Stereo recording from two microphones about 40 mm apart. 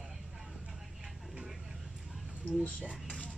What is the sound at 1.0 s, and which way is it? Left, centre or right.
Vehicle, centre.